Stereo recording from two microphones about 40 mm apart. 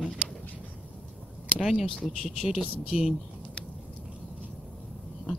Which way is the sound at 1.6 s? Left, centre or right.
Centre.